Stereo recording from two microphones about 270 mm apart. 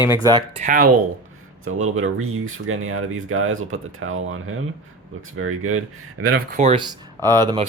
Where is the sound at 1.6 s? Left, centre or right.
Right.